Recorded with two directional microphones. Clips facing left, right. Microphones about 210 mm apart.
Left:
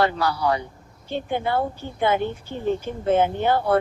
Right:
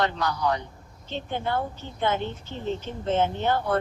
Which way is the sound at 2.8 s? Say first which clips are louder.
Left 4 dB; 10° left (ahead or behind).